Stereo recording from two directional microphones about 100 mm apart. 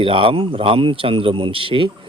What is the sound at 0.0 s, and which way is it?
Speech, 60° right (ahead or behind).